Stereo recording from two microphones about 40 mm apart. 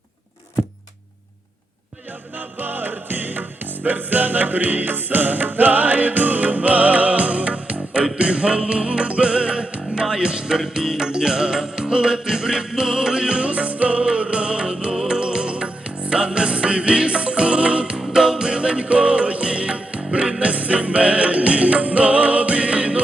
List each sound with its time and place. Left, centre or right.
0.6 s a sound: centre
2.6 s music: right
13.5 s music: right